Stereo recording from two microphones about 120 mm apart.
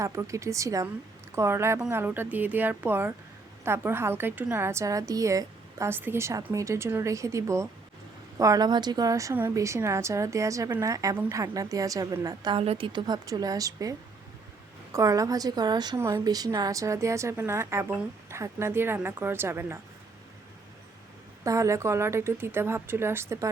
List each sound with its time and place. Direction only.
0.0 s a woman's voice: 25° right (ahead or behind)
12.5 s a woman's voice: 50° right (ahead or behind); by 13.9 s 30° right (ahead or behind)
14.9 s a woman's voice: 30° right (ahead or behind)
21.4 s a woman's voice: 25° right (ahead or behind)